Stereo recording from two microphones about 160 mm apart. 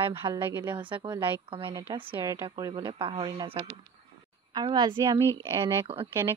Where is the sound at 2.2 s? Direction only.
20° right (ahead or behind).